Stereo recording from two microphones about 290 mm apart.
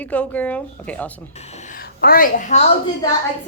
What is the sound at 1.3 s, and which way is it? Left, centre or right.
A child's voice, left.